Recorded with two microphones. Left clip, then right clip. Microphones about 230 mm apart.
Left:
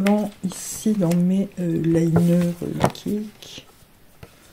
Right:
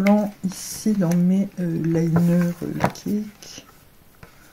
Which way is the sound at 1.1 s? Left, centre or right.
Left.